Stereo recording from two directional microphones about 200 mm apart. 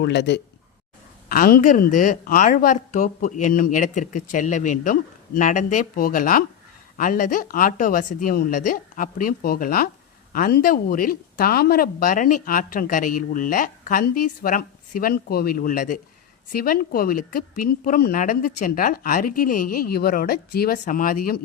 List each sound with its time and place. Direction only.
0.0 s speech: 60° left (ahead or behind)
1.3 s speech: 45° left (ahead or behind)